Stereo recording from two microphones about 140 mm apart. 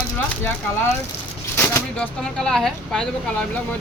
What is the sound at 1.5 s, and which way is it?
Shuffling cards, 20° left (ahead or behind).